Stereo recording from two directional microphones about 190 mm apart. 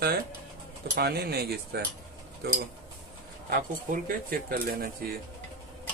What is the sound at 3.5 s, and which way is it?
Speech, 50° right (ahead or behind).